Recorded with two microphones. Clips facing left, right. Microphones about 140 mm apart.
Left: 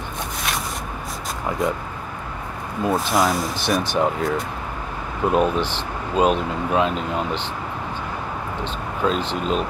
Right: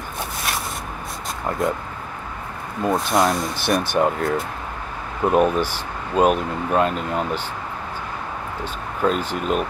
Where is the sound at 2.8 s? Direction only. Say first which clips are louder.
Right 1 dB; centre (ahead or behind).